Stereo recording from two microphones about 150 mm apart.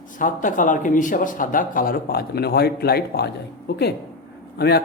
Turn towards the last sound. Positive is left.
turn(degrees=90)